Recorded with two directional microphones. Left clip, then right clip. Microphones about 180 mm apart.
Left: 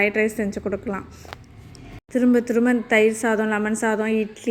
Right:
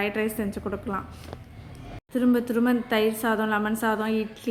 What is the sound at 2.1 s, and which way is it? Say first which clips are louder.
A woman's voice: left 5 dB; 20° left (ahead or behind).